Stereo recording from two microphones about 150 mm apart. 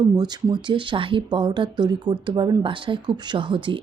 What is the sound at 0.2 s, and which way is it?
Speech, 30° right (ahead or behind).